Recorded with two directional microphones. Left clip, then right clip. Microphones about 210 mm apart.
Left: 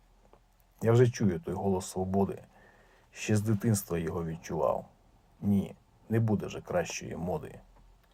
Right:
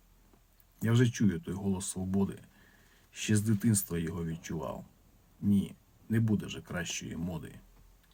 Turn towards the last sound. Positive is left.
turn(degrees=-15)  # may be behind; listen again after turning